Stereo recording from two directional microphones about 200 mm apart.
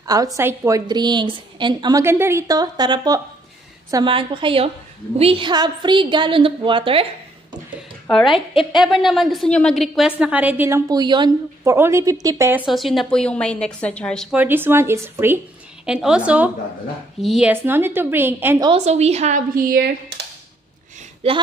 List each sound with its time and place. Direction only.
0.0 s a woman's voice: 15° right (ahead or behind)
8.1 s a woman's voice: centre (ahead or behind)
18.7 s a woman's voice: 35° right (ahead or behind)
19.7 s speech: 55° right (ahead or behind)
21.2 s a woman's voice: 30° right (ahead or behind)